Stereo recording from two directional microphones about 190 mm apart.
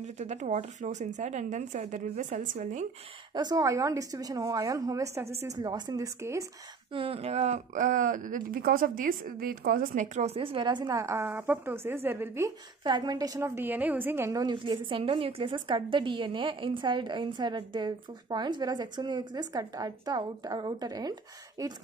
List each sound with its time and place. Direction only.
0.0 s a woman's voice: 35° right (ahead or behind)
3.3 s a woman's voice: 20° right (ahead or behind)
6.9 s speech: 30° right (ahead or behind)